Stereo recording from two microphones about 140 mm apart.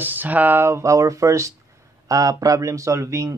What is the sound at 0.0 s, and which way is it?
Speech, 15° right (ahead or behind).